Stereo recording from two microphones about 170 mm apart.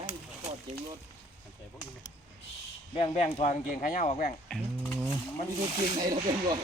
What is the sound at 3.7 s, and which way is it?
Speech, 55° left (ahead or behind).